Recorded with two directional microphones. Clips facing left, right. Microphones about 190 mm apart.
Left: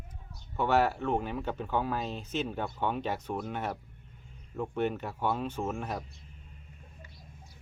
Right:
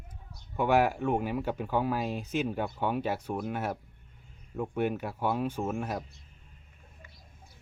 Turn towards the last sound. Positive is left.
turn(degrees=-5)  # may be behind; listen again after turning